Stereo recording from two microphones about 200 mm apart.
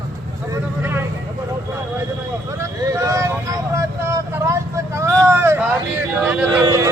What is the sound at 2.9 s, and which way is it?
Vehicle, 15° right (ahead or behind).